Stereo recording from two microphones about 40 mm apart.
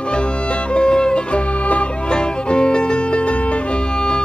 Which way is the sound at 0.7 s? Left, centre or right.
Left.